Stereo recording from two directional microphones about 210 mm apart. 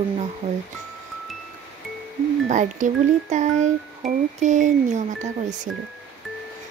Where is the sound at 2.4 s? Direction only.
35° right (ahead or behind).